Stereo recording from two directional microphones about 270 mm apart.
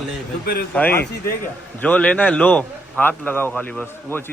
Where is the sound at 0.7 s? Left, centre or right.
Centre.